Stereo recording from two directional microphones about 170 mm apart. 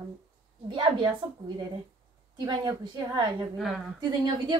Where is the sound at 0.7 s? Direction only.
30° right (ahead or behind).